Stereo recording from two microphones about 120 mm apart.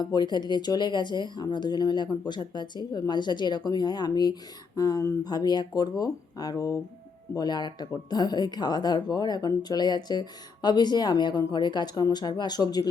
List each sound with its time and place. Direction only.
0.0 s speech: 35° left (ahead or behind)